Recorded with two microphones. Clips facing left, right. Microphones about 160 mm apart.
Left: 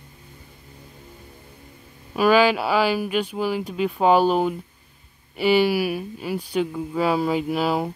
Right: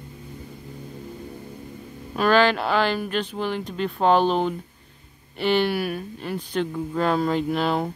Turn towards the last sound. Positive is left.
turn(degrees=5)  # may be behind; listen again after turning